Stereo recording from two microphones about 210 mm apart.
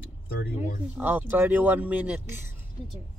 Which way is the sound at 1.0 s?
10° right (ahead or behind).